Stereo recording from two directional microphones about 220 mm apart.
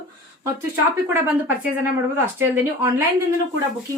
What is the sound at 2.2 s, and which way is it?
Speech, 10° right (ahead or behind).